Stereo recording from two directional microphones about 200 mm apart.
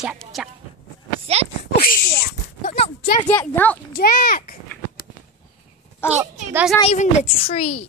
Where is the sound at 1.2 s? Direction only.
30° right (ahead or behind).